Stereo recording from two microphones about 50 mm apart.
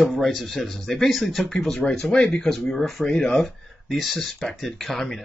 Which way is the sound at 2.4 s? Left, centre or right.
Centre.